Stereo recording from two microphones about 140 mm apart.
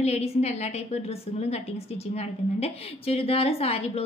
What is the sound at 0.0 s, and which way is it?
A woman's voice, 50° left (ahead or behind).